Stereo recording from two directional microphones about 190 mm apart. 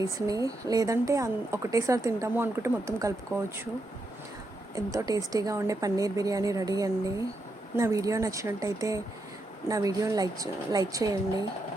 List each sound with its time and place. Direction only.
0.0 s speech: 20° right (ahead or behind)
4.7 s a woman's voice: 15° right (ahead or behind)